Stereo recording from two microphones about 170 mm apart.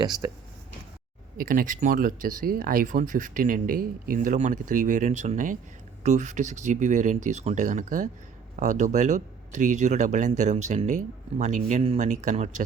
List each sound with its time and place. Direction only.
1.4 s speech: 55° right (ahead or behind)